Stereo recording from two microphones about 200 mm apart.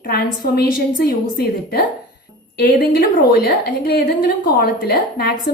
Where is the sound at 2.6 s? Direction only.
45° left (ahead or behind).